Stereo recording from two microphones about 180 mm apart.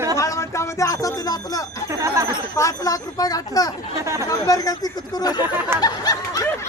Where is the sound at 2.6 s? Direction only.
20° left (ahead or behind).